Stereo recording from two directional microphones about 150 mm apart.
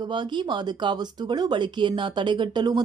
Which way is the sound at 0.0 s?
30° right (ahead or behind).